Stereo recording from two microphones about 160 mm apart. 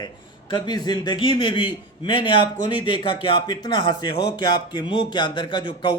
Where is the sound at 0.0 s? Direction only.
30° left (ahead or behind).